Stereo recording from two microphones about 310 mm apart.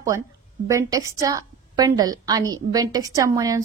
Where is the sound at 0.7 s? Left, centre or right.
Centre.